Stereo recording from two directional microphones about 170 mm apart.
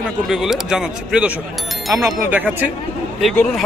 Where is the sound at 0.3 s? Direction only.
Centre (ahead or behind).